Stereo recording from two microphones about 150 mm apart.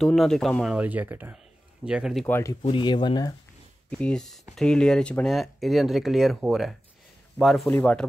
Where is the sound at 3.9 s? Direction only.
5° left (ahead or behind).